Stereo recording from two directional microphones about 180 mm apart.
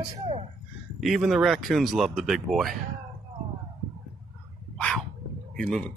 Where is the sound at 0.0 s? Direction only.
35° right (ahead or behind).